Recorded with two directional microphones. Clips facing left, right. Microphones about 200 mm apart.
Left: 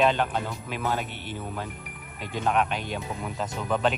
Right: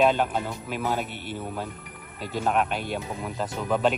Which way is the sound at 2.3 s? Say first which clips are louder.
Right 1 dB; 5° right (ahead or behind).